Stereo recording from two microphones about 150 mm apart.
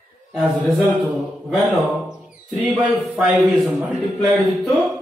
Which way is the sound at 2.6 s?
10° right (ahead or behind).